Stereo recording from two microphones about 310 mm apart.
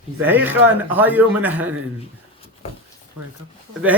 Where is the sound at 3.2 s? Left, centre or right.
Right.